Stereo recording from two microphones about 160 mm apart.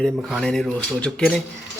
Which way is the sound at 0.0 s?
5° left (ahead or behind).